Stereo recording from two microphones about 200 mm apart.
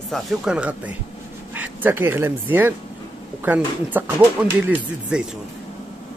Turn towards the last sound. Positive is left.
turn(degrees=-5)  # may be behind; listen again after turning